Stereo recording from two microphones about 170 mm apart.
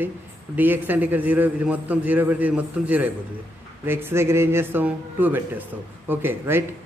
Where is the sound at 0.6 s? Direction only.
10° right (ahead or behind).